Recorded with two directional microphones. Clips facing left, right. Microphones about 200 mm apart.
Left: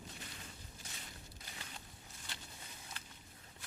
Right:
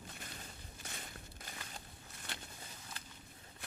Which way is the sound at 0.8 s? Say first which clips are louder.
Right 6 dB; 60° right (ahead or behind).